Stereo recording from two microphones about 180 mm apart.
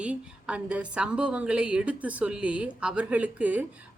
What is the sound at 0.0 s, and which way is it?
A woman's voice, 5° right (ahead or behind).